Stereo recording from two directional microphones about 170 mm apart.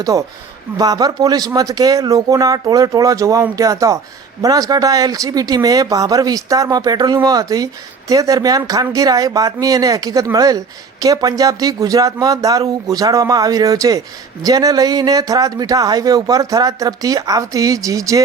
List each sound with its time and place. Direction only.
0.0 s speech: 20° right (ahead or behind)